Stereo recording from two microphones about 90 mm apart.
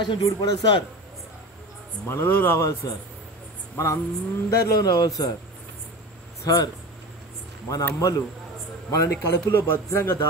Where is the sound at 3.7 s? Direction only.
30° left (ahead or behind).